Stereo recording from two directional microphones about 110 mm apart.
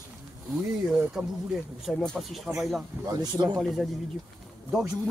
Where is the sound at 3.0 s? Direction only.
40° right (ahead or behind).